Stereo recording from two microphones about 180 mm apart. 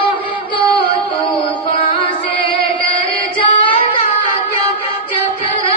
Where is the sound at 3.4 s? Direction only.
30° left (ahead or behind).